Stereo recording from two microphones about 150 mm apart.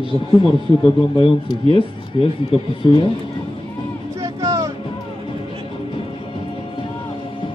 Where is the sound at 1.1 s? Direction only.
35° left (ahead or behind).